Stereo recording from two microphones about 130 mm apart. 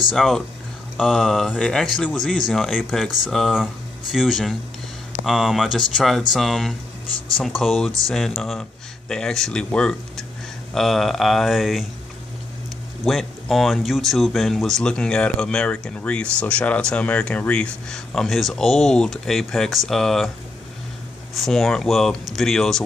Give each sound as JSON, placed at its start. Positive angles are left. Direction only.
{"t": 0.1, "sound": "speech", "side_deg": 0}
{"t": 13.0, "sound": "speech", "side_deg": 0}
{"t": 21.4, "sound": "speech", "side_deg": 0}